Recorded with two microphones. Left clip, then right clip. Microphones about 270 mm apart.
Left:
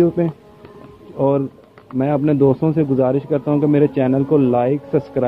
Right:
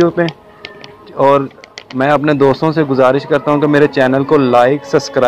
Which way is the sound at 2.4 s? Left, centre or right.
Centre.